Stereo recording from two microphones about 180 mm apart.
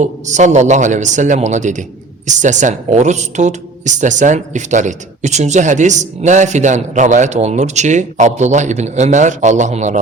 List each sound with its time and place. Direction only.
0.0 s speech: 40° right (ahead or behind)